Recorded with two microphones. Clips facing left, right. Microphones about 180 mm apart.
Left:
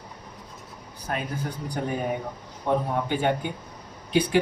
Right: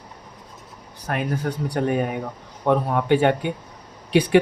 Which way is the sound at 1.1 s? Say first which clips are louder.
Right 6 dB; 75° right (ahead or behind).